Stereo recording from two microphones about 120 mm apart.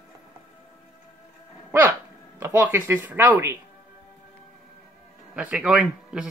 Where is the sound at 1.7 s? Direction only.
15° right (ahead or behind).